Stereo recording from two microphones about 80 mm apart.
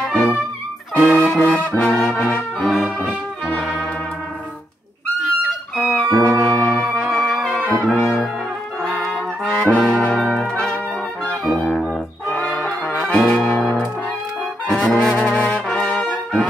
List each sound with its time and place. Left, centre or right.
0.9 s brass instrument: centre
2.6 s brass instrument: centre
3.1 s brass instrument: centre
5.8 s music: centre
7.7 s brass instrument: centre
9.4 s brass instrument: centre
10.3 s trumpet: centre
11.4 s brass instrument: centre
12.3 s music: centre
13.2 s brass instrument: centre
14.7 s trombone: centre
15.8 s brass instrument: centre